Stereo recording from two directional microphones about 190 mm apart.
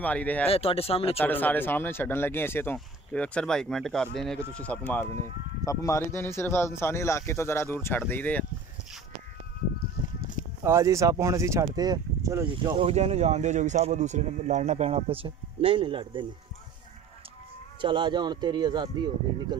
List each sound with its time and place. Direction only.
0.0 s speech: 5° left (ahead or behind)
0.5 s speech: 30° left (ahead or behind)
1.1 s speech: 10° left (ahead or behind)
10.6 s speech: 15° right (ahead or behind)
12.7 s speech: 30° right (ahead or behind)
17.7 s speech: 25° right (ahead or behind)